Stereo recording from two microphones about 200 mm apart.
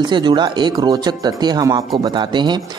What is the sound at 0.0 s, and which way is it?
Speech, 20° right (ahead or behind).